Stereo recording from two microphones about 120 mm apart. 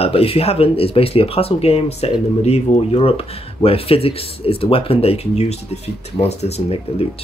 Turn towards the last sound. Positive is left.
turn(degrees=60)  # may be behind; listen again after turning